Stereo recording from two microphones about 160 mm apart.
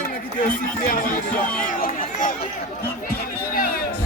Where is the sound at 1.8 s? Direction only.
60° left (ahead or behind).